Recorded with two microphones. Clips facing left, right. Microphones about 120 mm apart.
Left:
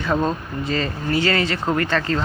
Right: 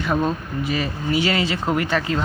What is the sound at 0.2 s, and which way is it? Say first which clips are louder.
Speech: even; 25° left (ahead or behind).